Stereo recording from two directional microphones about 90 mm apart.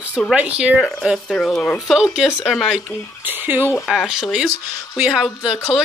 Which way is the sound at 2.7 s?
20° right (ahead or behind).